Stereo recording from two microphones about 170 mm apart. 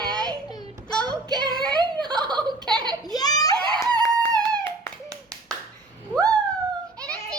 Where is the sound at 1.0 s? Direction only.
25° right (ahead or behind).